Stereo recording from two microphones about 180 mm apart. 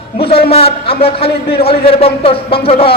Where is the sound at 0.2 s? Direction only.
30° left (ahead or behind).